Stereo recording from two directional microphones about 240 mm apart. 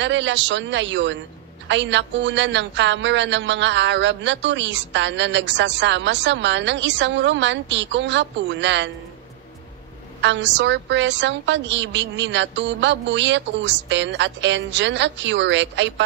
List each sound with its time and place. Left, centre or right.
0.0 s speech: right
10.2 s speech: right